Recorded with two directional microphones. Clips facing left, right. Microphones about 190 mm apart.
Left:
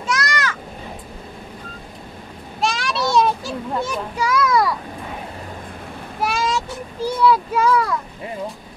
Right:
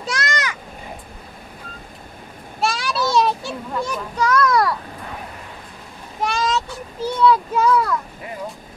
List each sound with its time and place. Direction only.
0.0 s a sound: 30° right (ahead or behind)
2.6 s children playing: centre (ahead or behind)
6.2 s vehicle: 10° left (ahead or behind)
7.2 s speech: 5° left (ahead or behind)